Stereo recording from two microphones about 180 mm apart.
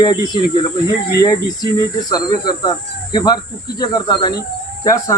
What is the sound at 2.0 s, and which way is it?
Speech, 20° left (ahead or behind).